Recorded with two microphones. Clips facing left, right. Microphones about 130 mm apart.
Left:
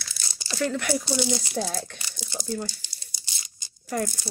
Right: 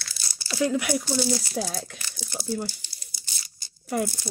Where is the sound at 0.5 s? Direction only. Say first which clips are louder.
Right 2 dB; 10° right (ahead or behind).